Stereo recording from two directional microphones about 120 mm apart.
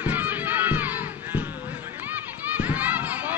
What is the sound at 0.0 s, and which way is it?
Crowd, 15° right (ahead or behind).